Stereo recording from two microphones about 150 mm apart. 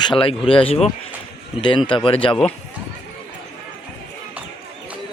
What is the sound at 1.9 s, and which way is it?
Speech, 35° left (ahead or behind).